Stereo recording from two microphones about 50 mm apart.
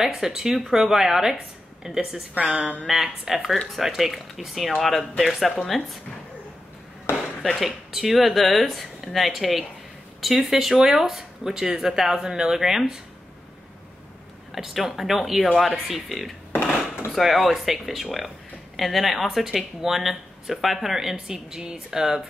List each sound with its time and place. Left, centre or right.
0.0 s speech: centre
2.3 s a woman's voice: right
2.9 s speech: centre
7.1 s chop: left
7.6 s speech: centre
14.5 s speech: centre